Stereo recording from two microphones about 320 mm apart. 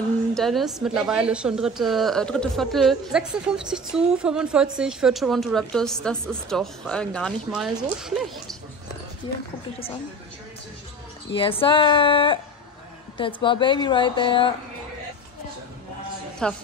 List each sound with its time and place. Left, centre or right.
0.3 s a woman's voice: centre
11.3 s a woman's voice: centre
16.4 s a woman's voice: centre